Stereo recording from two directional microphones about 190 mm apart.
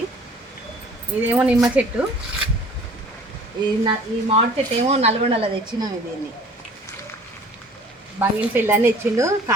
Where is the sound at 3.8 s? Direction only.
30° right (ahead or behind).